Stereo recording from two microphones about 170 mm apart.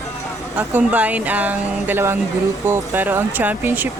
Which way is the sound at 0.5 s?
10° right (ahead or behind).